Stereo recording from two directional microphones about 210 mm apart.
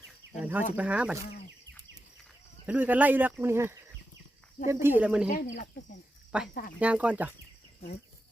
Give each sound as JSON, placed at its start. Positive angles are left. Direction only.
{"t": 0.3, "sound": "speech", "side_deg": -10}
{"t": 2.6, "sound": "speech", "side_deg": -10}
{"t": 5.3, "sound": "speech", "side_deg": 35}
{"t": 6.7, "sound": "speech", "side_deg": -5}